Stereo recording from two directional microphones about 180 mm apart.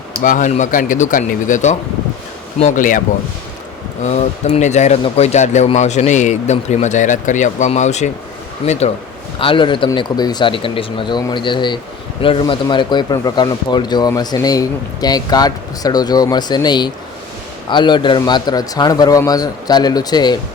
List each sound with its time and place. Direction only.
0.2 s speech: 45° left (ahead or behind)
4.0 s speech: 40° left (ahead or behind)
9.4 s speech: 30° left (ahead or behind)